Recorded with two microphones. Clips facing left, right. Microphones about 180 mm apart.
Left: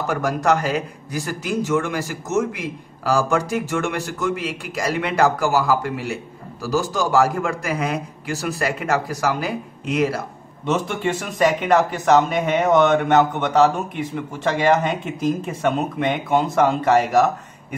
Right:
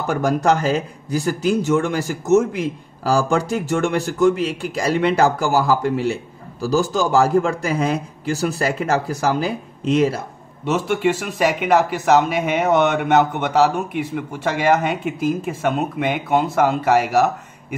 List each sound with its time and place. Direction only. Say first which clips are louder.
0.1 s a man's voice: right 3 dB; 30° right (ahead or behind)
10.6 s a man's voice: right 3 dB; 5° right (ahead or behind)